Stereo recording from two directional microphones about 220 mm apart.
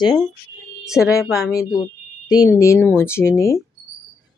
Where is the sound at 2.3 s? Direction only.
15° left (ahead or behind).